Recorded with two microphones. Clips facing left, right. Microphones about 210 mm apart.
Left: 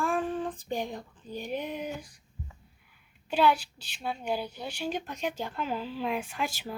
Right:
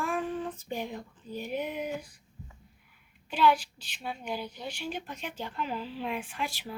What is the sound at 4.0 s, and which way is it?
Speech, 40° left (ahead or behind).